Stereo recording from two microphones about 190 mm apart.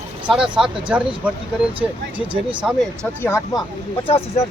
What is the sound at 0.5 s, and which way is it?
Speech, 5° right (ahead or behind).